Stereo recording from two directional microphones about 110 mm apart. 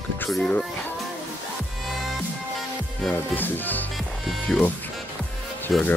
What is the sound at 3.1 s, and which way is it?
Speech, 15° left (ahead or behind).